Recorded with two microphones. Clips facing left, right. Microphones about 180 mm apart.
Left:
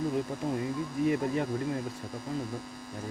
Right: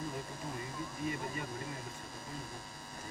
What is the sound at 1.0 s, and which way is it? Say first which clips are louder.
Speech: left 12 dB; 75° left (ahead or behind).